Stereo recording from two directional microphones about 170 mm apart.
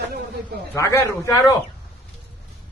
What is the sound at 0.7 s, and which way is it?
Speech, 15° left (ahead or behind).